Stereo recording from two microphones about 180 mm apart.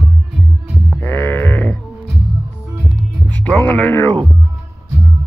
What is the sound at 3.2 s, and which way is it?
Music, 10° left (ahead or behind).